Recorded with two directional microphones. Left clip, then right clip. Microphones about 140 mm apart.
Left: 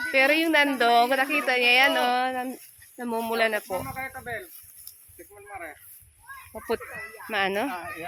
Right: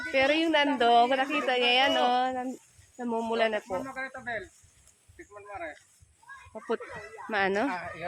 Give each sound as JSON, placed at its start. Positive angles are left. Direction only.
{"t": 0.1, "sound": "speech", "side_deg": 20}
{"t": 3.9, "sound": "speech", "side_deg": -20}
{"t": 5.5, "sound": "speech", "side_deg": -10}
{"t": 6.5, "sound": "speech", "side_deg": 5}
{"t": 7.3, "sound": "speech", "side_deg": -15}